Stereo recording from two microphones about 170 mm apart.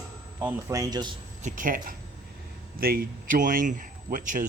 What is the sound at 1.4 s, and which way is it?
A man's voice, 45° right (ahead or behind).